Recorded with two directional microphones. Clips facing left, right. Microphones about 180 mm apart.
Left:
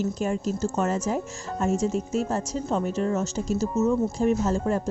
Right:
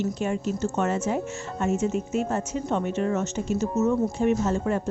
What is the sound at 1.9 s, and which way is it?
A woman's voice, 35° left (ahead or behind).